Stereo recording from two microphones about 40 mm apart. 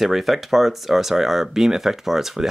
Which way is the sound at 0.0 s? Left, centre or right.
Centre.